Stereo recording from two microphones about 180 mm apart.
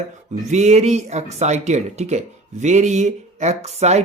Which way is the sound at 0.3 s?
40° right (ahead or behind).